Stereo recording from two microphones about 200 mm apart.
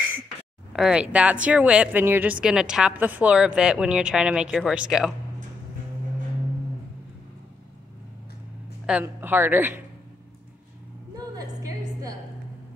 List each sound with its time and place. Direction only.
0.7 s a woman's voice: 5° right (ahead or behind)
8.8 s speech: 10° right (ahead or behind)
11.1 s music: 20° right (ahead or behind)